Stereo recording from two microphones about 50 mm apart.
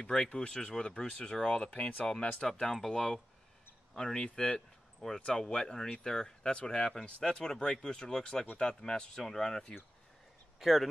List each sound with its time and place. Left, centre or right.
0.0 s speech: centre
2.6 s speech: centre
4.6 s a sound: centre
5.2 s speech: centre
10.6 s speech: centre